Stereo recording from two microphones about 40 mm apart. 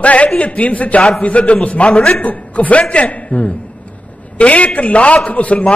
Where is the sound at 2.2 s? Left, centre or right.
Left.